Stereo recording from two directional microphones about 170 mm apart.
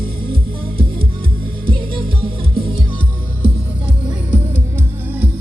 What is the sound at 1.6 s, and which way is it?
Music, 30° right (ahead or behind).